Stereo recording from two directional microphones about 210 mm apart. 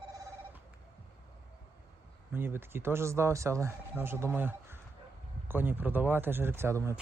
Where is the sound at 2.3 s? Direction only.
10° right (ahead or behind).